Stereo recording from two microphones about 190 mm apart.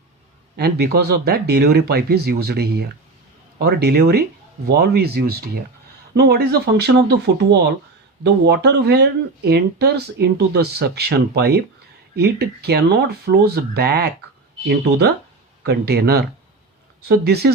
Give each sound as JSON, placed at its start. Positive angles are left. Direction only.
{"t": 0.5, "sound": "speech", "side_deg": -60}
{"t": 8.2, "sound": "speech", "side_deg": -60}